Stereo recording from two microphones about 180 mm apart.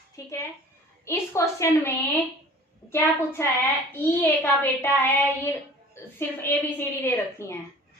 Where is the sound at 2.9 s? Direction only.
15° left (ahead or behind).